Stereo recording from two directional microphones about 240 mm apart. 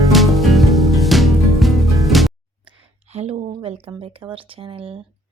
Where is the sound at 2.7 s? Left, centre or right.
Right.